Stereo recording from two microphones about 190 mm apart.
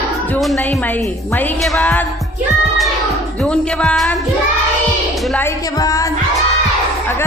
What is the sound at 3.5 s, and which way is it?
Speech, 5° left (ahead or behind).